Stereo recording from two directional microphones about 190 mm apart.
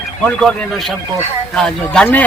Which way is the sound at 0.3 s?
Centre (ahead or behind).